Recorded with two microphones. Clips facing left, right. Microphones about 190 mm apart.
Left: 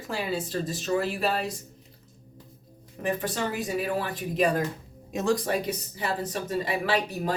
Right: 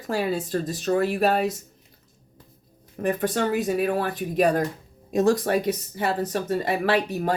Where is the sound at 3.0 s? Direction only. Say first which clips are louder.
Right 5 dB; 50° right (ahead or behind).